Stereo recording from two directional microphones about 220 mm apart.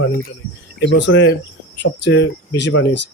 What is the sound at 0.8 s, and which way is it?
Speech, 55° left (ahead or behind).